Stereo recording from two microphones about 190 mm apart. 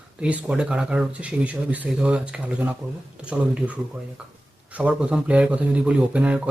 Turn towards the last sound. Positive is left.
turn(degrees=-5)  # may be behind; listen again after turning